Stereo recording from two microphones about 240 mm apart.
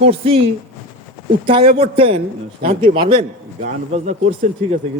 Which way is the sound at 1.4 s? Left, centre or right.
Right.